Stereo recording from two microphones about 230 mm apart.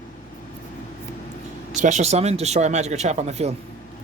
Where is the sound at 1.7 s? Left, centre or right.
Right.